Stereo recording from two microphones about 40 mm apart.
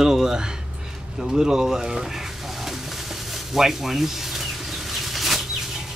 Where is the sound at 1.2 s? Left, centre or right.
Centre.